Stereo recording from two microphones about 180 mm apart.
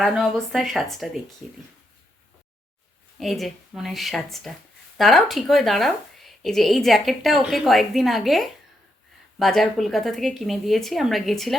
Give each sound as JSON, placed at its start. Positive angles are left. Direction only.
{"t": 0.0, "sound": "a woman's voice", "side_deg": 0}
{"t": 3.2, "sound": "a woman's voice", "side_deg": 0}